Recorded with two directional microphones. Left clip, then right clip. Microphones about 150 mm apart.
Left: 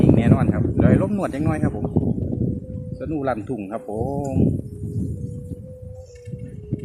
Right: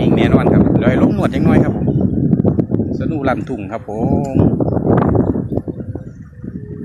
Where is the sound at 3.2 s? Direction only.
20° right (ahead or behind).